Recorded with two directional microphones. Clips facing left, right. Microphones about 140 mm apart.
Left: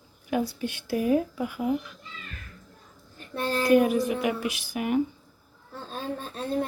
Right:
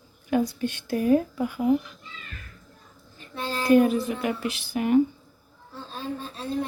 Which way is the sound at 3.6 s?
10° left (ahead or behind).